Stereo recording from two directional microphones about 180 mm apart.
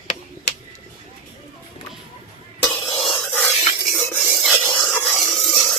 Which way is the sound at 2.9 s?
30° left (ahead or behind).